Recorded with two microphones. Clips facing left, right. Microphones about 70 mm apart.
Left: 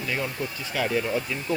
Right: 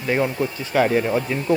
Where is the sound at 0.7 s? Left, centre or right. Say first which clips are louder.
Right 7 dB; right.